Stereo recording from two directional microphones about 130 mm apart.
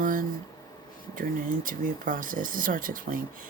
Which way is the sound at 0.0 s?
90° right.